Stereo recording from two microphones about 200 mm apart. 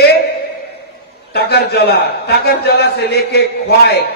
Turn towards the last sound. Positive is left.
turn(degrees=55)  # may be behind; listen again after turning